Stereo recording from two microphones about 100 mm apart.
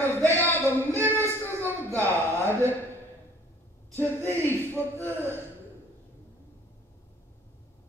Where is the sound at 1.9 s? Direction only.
20° left (ahead or behind).